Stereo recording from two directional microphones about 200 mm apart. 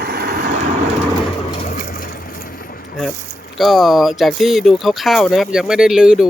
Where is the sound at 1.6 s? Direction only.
40° left (ahead or behind).